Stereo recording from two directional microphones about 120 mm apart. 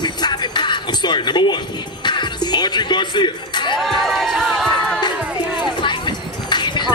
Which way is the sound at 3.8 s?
Centre (ahead or behind).